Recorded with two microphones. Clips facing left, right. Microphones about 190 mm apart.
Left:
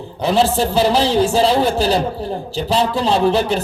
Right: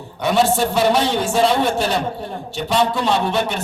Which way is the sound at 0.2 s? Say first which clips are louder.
Left 1 dB; 30° left (ahead or behind).